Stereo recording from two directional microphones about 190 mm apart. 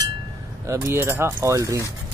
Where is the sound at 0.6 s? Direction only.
15° right (ahead or behind).